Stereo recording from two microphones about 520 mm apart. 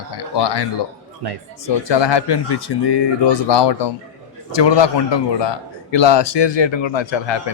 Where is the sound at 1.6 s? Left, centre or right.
Left.